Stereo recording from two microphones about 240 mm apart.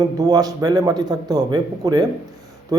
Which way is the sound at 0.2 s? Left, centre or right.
Centre.